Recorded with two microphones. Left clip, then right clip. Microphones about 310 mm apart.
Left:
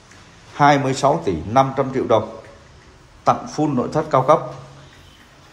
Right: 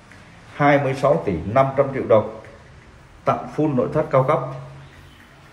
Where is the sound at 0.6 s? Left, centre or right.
Centre.